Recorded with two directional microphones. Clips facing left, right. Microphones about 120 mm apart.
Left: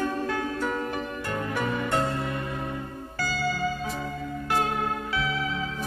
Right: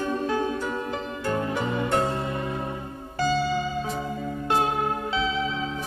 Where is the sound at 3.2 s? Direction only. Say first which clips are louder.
Right 7 dB; 25° right (ahead or behind).